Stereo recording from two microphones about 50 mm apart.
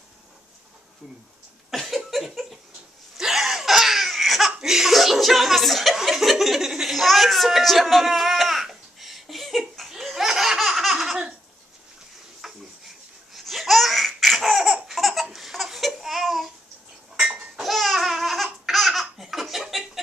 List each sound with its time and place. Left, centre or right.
1.7 s a sound: centre
3.2 s laughter: centre
4.5 s laughter: centre
5.9 s a sound: centre
8.6 s laughter: centre
12.4 s laughter: centre
15.2 s babbling: centre
17.2 s a sound: centre
17.6 s laughter: centre